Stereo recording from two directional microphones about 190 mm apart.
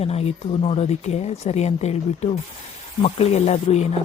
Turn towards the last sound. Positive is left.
turn(degrees=35)  # may be behind; listen again after turning